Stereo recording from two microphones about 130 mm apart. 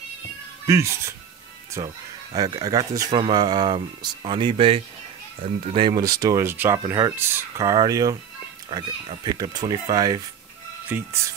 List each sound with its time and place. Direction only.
0.7 s speech: 20° right (ahead or behind)
3.1 s speech: 35° right (ahead or behind)
6.0 s speech: 25° right (ahead or behind)
10.9 s speech: 15° right (ahead or behind)